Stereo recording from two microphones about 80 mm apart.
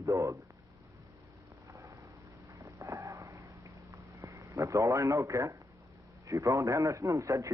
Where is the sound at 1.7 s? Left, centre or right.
Right.